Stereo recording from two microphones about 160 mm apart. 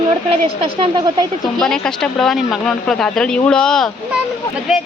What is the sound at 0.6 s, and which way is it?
Speech, 30° right (ahead or behind).